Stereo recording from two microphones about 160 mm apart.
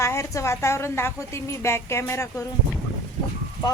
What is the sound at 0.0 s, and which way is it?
A woman's voice, 20° left (ahead or behind).